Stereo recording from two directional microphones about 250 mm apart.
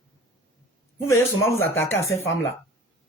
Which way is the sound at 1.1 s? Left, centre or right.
Centre.